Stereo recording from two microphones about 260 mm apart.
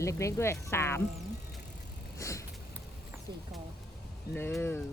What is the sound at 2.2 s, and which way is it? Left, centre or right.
Vehicle, centre.